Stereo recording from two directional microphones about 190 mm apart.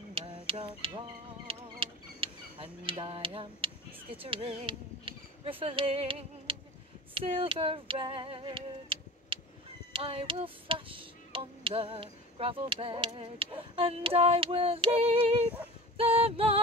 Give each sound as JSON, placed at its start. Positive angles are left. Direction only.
{"t": 0.1, "sound": "a sound", "side_deg": -30}
{"t": 4.2, "sound": "speech", "side_deg": -30}
{"t": 7.2, "sound": "female singing", "side_deg": -30}
{"t": 9.9, "sound": "tick", "side_deg": -30}
{"t": 16.0, "sound": "female singing", "side_deg": -30}